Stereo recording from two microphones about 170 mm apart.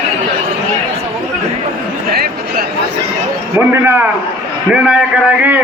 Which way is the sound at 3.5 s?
15° right (ahead or behind).